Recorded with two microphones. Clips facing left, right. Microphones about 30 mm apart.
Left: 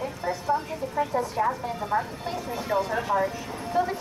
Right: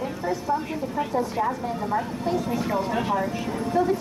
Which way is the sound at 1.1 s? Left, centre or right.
Centre.